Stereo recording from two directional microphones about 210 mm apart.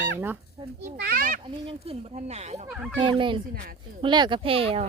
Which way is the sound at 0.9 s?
50° right (ahead or behind).